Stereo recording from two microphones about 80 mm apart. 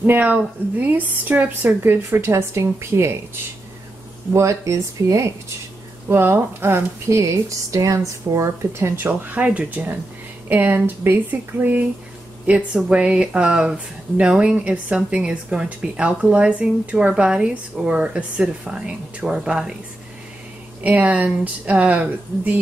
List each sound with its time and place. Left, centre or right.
0.0 s a woman's voice: right
4.3 s speech: right
9.0 s a woman's voice: right
12.4 s speech: centre
20.8 s a woman's voice: centre